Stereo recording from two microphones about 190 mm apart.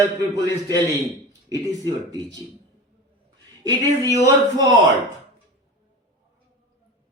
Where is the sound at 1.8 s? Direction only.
20° right (ahead or behind).